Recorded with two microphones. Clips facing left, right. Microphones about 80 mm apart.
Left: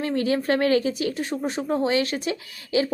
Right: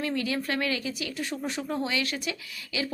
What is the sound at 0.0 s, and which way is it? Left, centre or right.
A woman's voice, left.